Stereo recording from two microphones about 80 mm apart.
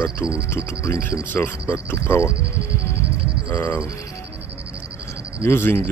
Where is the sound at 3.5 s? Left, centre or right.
Centre.